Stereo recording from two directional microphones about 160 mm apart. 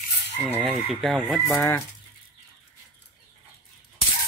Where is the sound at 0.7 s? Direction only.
Centre (ahead or behind).